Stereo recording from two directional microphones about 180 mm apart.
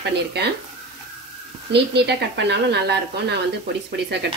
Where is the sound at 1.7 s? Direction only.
70° right (ahead or behind).